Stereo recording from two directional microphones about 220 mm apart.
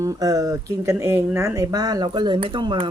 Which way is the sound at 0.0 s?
15° right (ahead or behind).